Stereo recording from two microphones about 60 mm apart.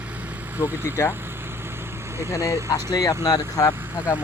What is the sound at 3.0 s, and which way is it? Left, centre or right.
Speech, left.